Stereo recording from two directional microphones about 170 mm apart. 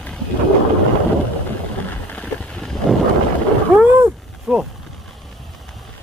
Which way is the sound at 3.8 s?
10° right (ahead or behind).